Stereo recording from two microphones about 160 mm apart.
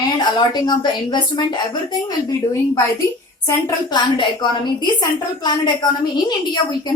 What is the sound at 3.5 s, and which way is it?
A woman's voice, 30° left (ahead or behind).